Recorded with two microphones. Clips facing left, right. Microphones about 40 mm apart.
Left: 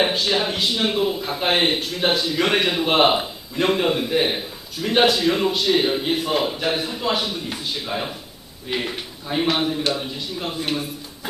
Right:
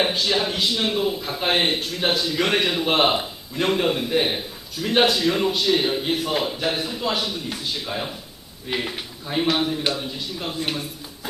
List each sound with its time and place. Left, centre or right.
0.0 s a man's voice: centre